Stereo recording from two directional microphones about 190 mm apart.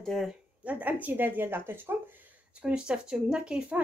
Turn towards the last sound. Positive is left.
turn(degrees=-5)  # may be behind; listen again after turning